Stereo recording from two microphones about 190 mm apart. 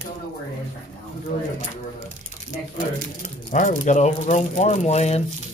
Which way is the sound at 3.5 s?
40° left (ahead or behind).